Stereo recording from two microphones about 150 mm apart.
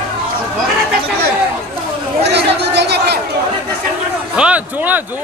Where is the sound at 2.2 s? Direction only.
90° right.